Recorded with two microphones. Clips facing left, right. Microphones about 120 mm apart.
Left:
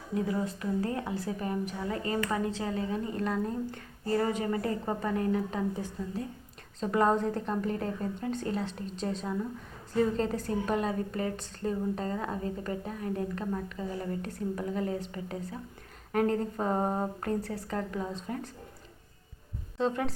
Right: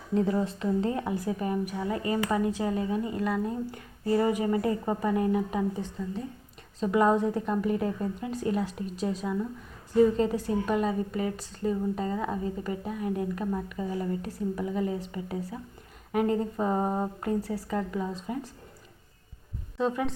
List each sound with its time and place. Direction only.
0.3 s a woman's voice: 25° right (ahead or behind)
6.7 s a woman's voice: 5° right (ahead or behind)